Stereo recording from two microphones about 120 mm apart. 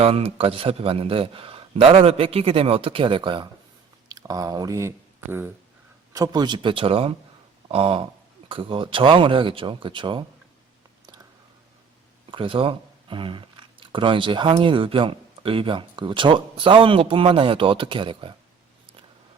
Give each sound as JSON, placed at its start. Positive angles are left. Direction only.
{"t": 0.0, "sound": "speech", "side_deg": -50}
{"t": 4.1, "sound": "speech", "side_deg": -30}
{"t": 6.1, "sound": "speech", "side_deg": -35}
{"t": 12.3, "sound": "speech", "side_deg": -45}